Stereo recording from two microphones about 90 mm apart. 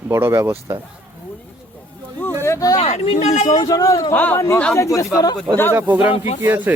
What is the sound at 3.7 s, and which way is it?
Speech, 40° left (ahead or behind).